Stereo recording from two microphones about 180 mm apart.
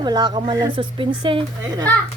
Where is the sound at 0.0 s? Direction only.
25° right (ahead or behind).